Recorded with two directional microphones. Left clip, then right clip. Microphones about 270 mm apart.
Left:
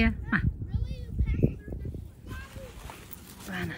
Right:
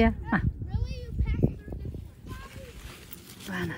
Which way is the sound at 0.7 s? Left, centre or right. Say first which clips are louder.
Right 3 dB; right.